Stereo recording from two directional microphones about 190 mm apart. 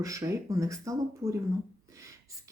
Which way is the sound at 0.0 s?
15° right (ahead or behind).